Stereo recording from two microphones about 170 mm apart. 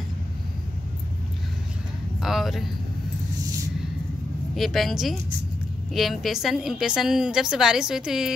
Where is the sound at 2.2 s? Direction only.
Centre (ahead or behind).